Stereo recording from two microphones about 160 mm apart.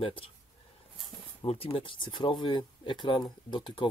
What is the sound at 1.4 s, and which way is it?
Speech, 35° left (ahead or behind).